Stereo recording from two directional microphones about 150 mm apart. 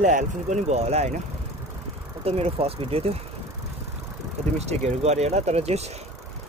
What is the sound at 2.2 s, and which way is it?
Speech, 40° right (ahead or behind).